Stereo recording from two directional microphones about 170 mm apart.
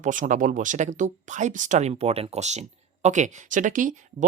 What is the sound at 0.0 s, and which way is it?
Speech, 50° right (ahead or behind).